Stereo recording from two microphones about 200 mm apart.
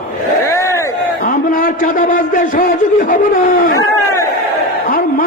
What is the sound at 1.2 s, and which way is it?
A man's voice, 45° left (ahead or behind).